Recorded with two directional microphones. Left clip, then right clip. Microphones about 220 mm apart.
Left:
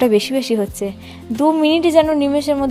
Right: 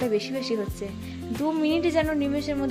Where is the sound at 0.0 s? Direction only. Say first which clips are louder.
Left 11 dB; 35° left (ahead or behind).